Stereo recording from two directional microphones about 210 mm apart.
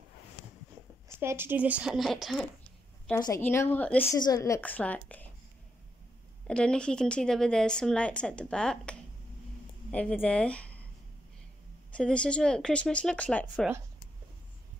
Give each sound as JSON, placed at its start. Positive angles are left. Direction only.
{"t": 1.0, "sound": "a woman's voice", "side_deg": -10}
{"t": 3.2, "sound": "a woman's voice", "side_deg": 15}
{"t": 6.4, "sound": "a woman's voice", "side_deg": 5}
{"t": 11.9, "sound": "a woman's voice", "side_deg": 5}